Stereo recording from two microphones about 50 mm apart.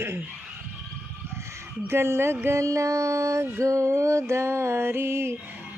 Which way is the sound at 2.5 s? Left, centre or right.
Right.